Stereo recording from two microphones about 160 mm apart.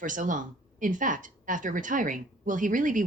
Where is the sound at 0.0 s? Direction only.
55° right (ahead or behind).